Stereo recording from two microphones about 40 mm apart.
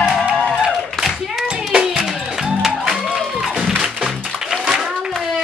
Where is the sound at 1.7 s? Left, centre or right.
Right.